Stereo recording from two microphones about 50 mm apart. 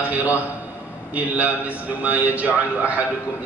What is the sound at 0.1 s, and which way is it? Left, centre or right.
A man's voice, right.